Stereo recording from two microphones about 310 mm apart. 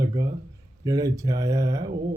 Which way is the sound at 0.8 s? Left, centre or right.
Centre.